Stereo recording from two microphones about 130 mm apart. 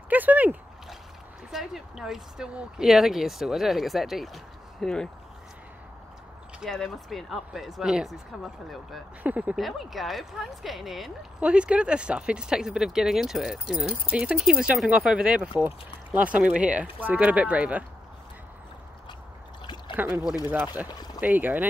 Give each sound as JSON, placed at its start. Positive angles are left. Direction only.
{"t": 0.1, "sound": "a sound", "side_deg": -10}
{"t": 1.5, "sound": "speech", "side_deg": 0}
{"t": 6.6, "sound": "speech", "side_deg": 0}
{"t": 9.2, "sound": "speech", "side_deg": -10}
{"t": 19.6, "sound": "a sound", "side_deg": 35}
{"t": 20.5, "sound": "speech", "side_deg": -15}